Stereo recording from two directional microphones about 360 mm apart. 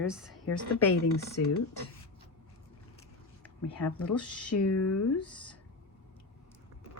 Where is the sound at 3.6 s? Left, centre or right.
Left.